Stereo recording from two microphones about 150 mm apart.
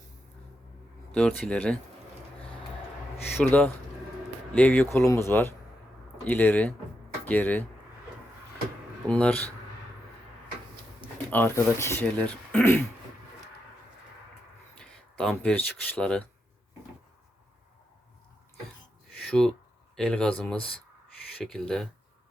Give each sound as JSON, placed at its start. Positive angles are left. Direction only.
{"t": 1.1, "sound": "speech", "side_deg": 5}
{"t": 3.4, "sound": "speech", "side_deg": 5}
{"t": 9.0, "sound": "speech", "side_deg": 10}
{"t": 11.3, "sound": "speech", "side_deg": 15}
{"t": 14.8, "sound": "speech", "side_deg": 5}
{"t": 19.2, "sound": "speech", "side_deg": 5}
{"t": 21.3, "sound": "speech", "side_deg": 5}